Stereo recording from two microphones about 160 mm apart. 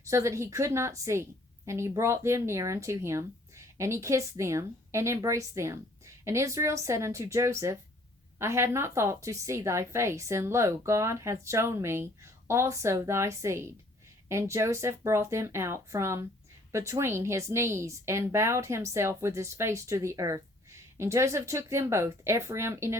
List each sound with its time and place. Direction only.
0.1 s a woman's voice: 20° right (ahead or behind)